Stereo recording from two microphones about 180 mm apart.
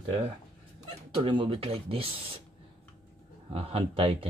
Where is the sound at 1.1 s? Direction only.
25° right (ahead or behind).